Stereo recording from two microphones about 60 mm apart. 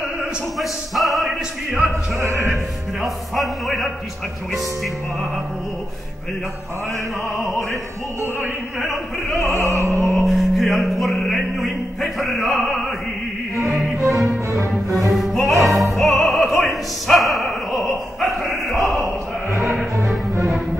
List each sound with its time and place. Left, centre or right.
0.6 s music: centre
1.9 s music: right
3.0 s music: centre
9.6 s music: right
10.2 s music: centre
12.0 s opera: centre
14.0 s music: centre
16.0 s opera: centre
19.6 s music: centre